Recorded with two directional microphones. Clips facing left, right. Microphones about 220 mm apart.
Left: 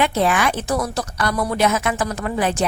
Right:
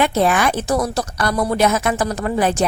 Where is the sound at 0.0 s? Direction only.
45° right (ahead or behind).